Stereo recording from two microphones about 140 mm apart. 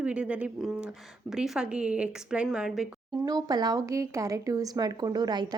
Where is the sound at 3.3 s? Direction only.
30° right (ahead or behind).